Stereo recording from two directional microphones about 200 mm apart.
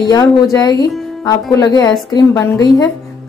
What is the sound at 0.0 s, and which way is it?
A woman's voice, 15° left (ahead or behind).